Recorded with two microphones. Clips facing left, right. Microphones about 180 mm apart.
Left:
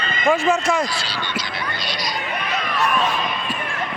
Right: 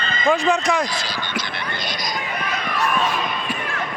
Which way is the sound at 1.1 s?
45° right (ahead or behind).